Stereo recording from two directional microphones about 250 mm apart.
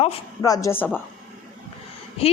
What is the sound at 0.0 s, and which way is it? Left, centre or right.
Speech, centre.